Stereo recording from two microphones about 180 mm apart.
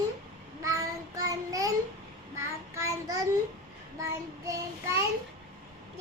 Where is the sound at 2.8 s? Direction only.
15° right (ahead or behind).